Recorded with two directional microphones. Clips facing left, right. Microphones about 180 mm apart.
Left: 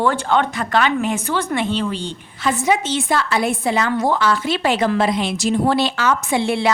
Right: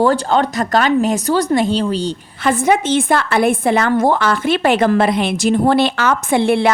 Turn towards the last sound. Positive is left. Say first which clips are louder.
# right 5 dB
turn(degrees=-55)  # may be behind; listen again after turning